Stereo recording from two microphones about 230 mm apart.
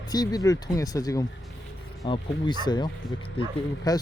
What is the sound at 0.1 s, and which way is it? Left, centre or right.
Speech, centre.